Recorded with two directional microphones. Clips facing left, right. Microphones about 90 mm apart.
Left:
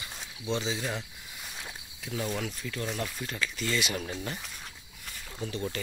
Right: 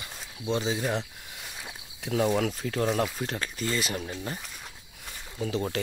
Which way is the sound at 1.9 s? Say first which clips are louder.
Right 8 dB; 60° right (ahead or behind).